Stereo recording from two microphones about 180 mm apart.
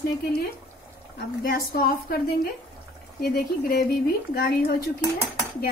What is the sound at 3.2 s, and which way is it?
A woman's voice, 60° left (ahead or behind).